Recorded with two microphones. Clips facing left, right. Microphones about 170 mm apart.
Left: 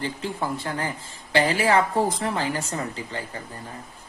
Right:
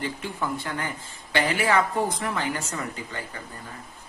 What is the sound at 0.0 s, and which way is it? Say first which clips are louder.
A woman's voice: left 2 dB; 30° left (ahead or behind).